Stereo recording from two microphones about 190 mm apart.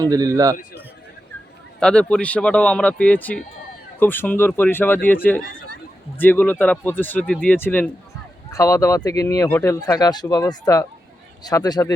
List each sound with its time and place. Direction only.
0.0 s a man's voice: 20° right (ahead or behind)
1.8 s speech: 5° left (ahead or behind)